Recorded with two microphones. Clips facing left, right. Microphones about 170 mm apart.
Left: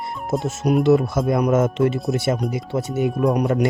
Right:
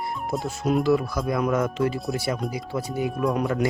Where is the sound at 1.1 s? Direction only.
45° left (ahead or behind).